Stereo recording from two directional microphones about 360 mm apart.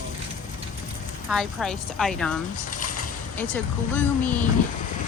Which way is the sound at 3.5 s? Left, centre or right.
Centre.